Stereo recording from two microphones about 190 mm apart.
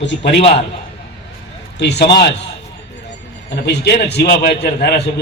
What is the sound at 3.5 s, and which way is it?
A man's voice, 65° left (ahead or behind).